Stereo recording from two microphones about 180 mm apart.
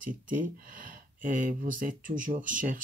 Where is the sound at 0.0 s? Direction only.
45° right (ahead or behind).